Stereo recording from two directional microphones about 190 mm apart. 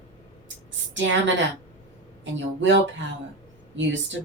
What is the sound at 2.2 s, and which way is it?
Speech, 75° right (ahead or behind).